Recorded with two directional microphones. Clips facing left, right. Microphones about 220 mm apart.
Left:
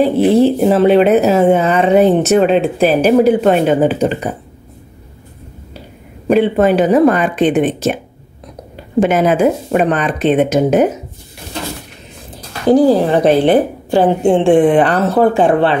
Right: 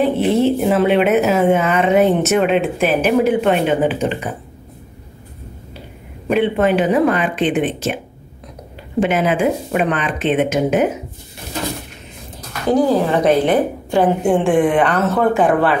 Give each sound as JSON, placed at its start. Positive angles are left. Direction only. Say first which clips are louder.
{"t": 0.0, "sound": "speech", "louder": "left 5 dB", "side_deg": 35}
{"t": 6.2, "sound": "speech", "louder": "left 4 dB", "side_deg": 40}
{"t": 9.0, "sound": "speech", "louder": "left 4 dB", "side_deg": 40}
{"t": 12.4, "sound": "speech", "louder": "left 5 dB", "side_deg": 30}